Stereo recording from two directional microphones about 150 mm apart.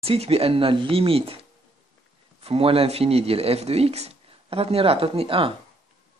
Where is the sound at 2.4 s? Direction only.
40° right (ahead or behind).